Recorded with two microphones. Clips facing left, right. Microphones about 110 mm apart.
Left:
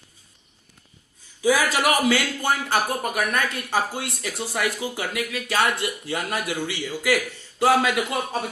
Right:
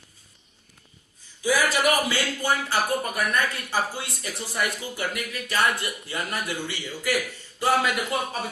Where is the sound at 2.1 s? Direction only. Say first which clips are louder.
Left 3 dB; 60° left (ahead or behind).